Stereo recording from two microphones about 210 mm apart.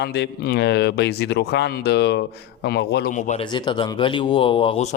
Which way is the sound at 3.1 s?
35° left (ahead or behind).